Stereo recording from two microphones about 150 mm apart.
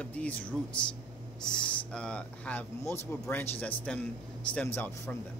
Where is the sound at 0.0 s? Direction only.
10° left (ahead or behind).